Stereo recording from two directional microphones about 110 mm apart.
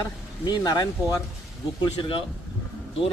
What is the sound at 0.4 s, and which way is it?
Speech, 40° left (ahead or behind).